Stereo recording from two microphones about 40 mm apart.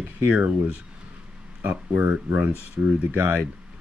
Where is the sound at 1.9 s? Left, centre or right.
Right.